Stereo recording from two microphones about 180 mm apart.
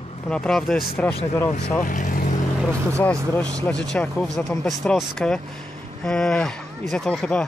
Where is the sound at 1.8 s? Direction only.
45° left (ahead or behind).